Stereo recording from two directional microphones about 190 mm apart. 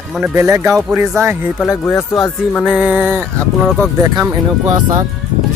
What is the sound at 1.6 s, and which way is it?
Speech, 10° left (ahead or behind).